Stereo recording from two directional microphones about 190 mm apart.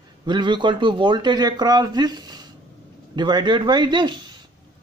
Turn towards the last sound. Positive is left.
turn(degrees=-25)  # may be behind; listen again after turning